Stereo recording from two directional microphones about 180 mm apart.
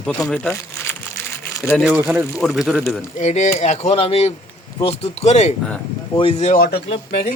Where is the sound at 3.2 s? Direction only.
40° left (ahead or behind).